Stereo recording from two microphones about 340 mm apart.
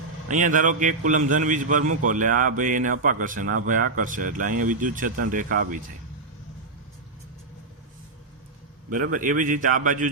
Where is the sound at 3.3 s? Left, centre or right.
Right.